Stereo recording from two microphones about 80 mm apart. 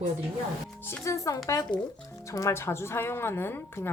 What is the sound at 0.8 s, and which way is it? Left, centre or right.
Speech, left.